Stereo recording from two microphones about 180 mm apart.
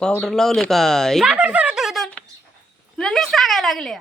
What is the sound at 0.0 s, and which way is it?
Speech, 5° left (ahead or behind).